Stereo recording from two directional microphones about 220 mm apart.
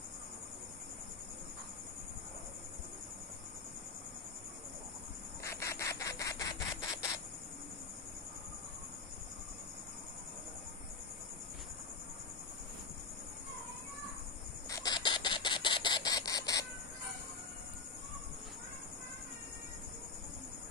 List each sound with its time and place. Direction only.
5.4 s rub: 15° left (ahead or behind)
14.7 s camera: 15° left (ahead or behind)